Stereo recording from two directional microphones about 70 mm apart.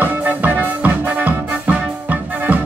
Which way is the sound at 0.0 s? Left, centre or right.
Right.